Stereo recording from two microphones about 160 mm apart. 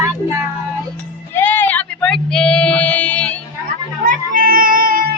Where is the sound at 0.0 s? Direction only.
20° right (ahead or behind).